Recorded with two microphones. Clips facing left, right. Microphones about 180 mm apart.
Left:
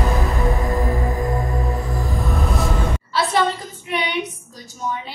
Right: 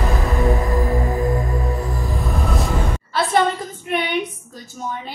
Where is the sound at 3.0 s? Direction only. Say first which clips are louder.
Right 2 dB; 50° right (ahead or behind).